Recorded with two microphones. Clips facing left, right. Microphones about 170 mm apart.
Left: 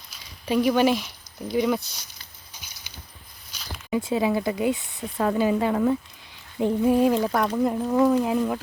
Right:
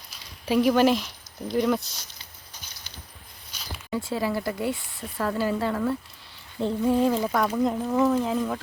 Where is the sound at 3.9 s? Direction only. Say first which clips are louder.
Left 4 dB; 20° left (ahead or behind).